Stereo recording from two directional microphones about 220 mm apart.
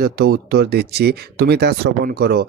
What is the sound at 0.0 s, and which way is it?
Speech, 45° right (ahead or behind).